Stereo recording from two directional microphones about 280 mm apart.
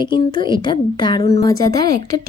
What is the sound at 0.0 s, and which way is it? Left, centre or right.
Speech, centre.